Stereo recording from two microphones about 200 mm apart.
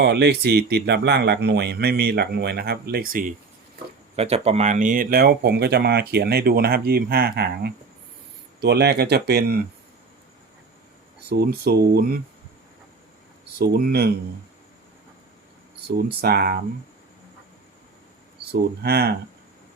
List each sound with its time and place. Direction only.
0.0 s speech: 55° right (ahead or behind)
4.1 s speech: 30° right (ahead or behind); by 9.6 s 55° right (ahead or behind)
11.3 s speech: 50° right (ahead or behind)
13.6 s speech: 50° right (ahead or behind)
16.0 s speech: 50° right (ahead or behind)
18.8 s speech: 55° right (ahead or behind)